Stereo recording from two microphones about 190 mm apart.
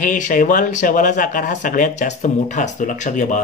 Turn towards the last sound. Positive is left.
turn(degrees=40)  # may be behind; listen again after turning